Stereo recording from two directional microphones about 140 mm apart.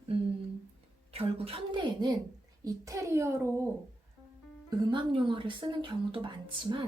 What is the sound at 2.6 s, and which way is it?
A child's voice, 20° right (ahead or behind).